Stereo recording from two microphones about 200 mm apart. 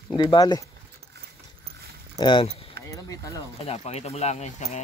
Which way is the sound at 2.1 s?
25° left (ahead or behind).